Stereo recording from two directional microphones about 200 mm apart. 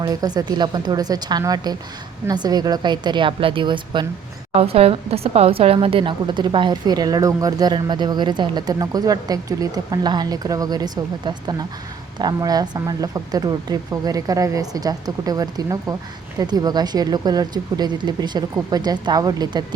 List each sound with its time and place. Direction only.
0.0 s a woman's voice: 20° right (ahead or behind)